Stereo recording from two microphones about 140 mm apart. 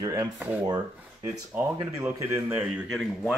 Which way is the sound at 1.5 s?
10° right (ahead or behind).